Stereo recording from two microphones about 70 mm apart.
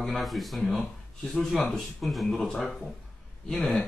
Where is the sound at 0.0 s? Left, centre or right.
Centre.